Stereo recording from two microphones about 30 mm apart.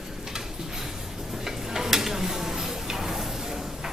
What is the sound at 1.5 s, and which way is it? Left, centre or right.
Tick-tock, centre.